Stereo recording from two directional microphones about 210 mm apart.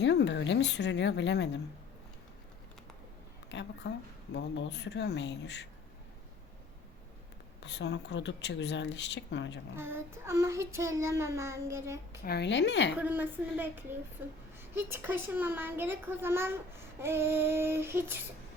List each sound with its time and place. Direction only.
0.0 s speech: 55° left (ahead or behind)
3.5 s speech: 55° left (ahead or behind)
7.6 s speech: 55° left (ahead or behind)
9.7 s a child's voice: 10° right (ahead or behind)
12.2 s speech: 50° left (ahead or behind)
13.0 s a child's voice: 10° right (ahead or behind)